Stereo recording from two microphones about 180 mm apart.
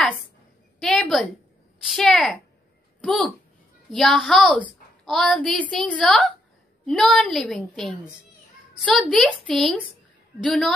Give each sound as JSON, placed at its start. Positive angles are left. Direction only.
{"t": 0.7, "sound": "a woman's voice", "side_deg": 0}